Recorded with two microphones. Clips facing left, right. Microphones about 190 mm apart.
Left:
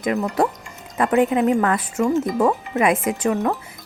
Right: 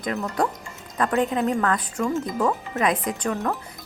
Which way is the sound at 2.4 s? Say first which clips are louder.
Left 5 dB; 25° left (ahead or behind).